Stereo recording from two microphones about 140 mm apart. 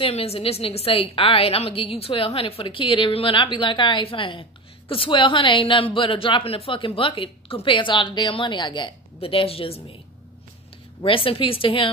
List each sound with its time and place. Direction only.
0.0 s a woman's voice: 45° left (ahead or behind)
11.0 s a woman's voice: 40° left (ahead or behind)